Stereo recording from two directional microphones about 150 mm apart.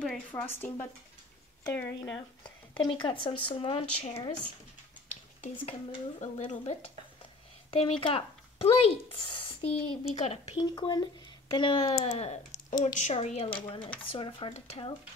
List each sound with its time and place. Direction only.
0.3 s speech: 15° left (ahead or behind)
2.0 s speech: 25° left (ahead or behind)
2.7 s speech: 35° left (ahead or behind)
5.4 s speech: 45° left (ahead or behind)
7.7 s speech: 35° left (ahead or behind)
10.6 s speech: 25° left (ahead or behind)